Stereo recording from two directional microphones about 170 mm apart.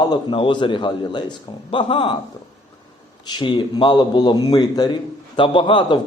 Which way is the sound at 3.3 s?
25° left (ahead or behind).